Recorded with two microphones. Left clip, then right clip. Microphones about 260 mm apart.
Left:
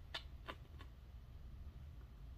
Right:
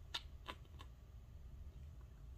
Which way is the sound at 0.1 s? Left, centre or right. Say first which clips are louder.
Right 1 dB; centre.